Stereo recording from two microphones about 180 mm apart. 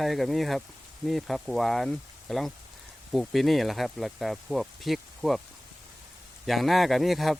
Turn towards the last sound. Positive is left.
turn(degrees=0)  # may be behind; listen again after turning